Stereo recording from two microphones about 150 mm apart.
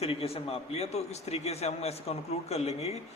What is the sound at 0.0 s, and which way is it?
A man's voice, 40° left (ahead or behind).